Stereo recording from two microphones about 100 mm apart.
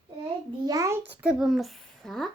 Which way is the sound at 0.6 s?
35° right (ahead or behind).